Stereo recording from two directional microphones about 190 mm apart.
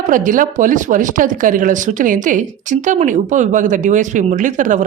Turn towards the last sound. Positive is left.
turn(degrees=-40)  # may be behind; listen again after turning